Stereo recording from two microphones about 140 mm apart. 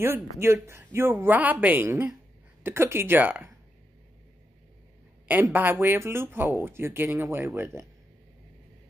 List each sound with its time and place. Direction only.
0.0 s speech: 15° right (ahead or behind)
5.3 s speech: 15° right (ahead or behind)